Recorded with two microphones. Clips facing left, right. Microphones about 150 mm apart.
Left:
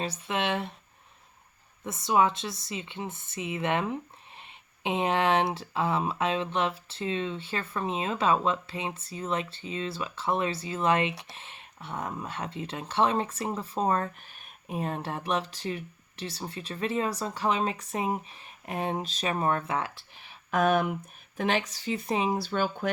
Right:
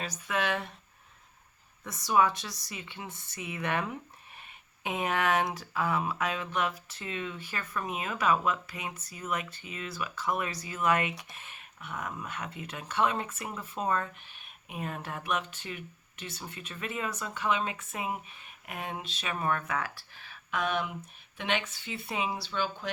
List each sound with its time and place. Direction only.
0.0 s speech: 25° left (ahead or behind)
1.8 s speech: 25° left (ahead or behind)
20.5 s speech: 50° left (ahead or behind)